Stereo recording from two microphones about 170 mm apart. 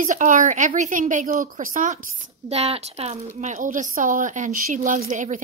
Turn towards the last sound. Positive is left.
turn(degrees=-50)  # may be behind; listen again after turning